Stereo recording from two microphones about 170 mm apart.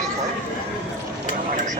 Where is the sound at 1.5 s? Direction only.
45° right (ahead or behind).